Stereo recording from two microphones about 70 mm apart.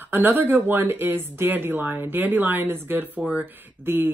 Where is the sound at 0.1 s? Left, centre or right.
Right.